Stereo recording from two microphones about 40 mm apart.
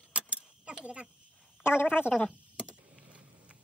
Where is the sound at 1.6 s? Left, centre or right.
Left.